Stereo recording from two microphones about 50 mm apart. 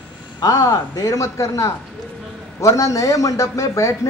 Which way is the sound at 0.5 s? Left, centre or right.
Left.